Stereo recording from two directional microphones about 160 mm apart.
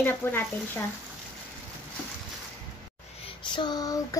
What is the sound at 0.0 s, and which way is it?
Speech, 15° left (ahead or behind).